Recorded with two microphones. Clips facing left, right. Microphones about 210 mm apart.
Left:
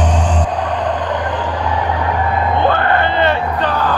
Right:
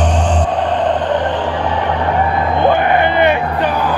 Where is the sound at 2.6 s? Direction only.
15° right (ahead or behind).